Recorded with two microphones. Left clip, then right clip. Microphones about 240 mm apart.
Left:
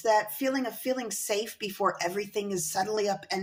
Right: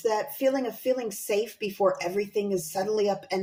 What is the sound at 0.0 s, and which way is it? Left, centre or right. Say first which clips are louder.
A woman's voice: even; centre.